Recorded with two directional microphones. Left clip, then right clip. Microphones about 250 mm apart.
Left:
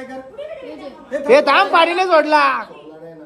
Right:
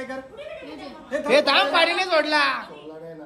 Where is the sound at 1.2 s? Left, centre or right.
Centre.